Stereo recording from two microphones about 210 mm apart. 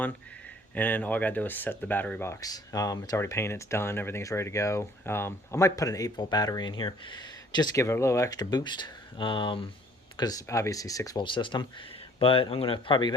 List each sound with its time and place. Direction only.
0.7 s speech: 5° left (ahead or behind)